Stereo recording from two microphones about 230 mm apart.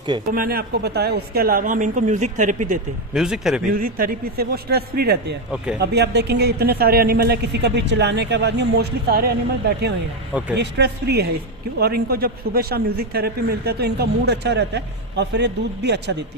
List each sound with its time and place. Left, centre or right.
0.3 s speech: right
3.1 s speech: centre
3.7 s speech: right